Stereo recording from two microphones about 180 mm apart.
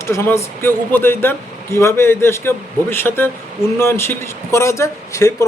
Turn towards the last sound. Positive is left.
turn(degrees=15)  # may be behind; listen again after turning